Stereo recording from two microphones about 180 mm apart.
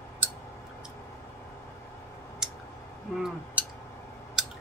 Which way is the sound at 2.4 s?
5° right (ahead or behind).